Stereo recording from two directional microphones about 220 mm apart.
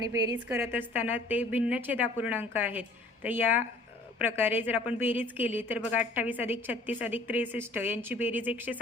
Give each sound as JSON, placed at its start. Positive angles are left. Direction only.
{"t": 0.0, "sound": "a woman's voice", "side_deg": -15}